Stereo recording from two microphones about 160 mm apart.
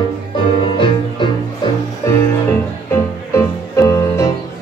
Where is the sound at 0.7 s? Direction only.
30° left (ahead or behind).